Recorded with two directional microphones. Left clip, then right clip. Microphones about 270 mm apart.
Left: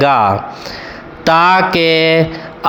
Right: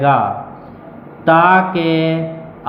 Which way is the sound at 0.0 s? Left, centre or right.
Left.